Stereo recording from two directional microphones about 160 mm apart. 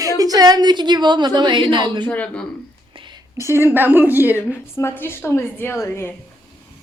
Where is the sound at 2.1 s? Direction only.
10° left (ahead or behind).